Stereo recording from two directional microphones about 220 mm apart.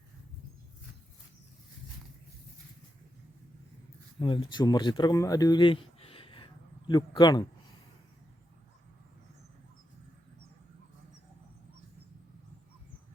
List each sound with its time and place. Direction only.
4.2 s speech: 20° left (ahead or behind)